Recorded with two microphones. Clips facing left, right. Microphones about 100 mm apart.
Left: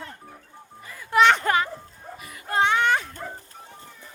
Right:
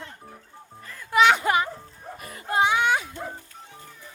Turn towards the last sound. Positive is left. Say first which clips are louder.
# even
turn(degrees=-5)  # may be behind; listen again after turning